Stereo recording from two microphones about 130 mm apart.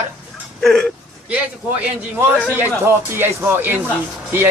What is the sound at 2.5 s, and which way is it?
Speech, 15° right (ahead or behind).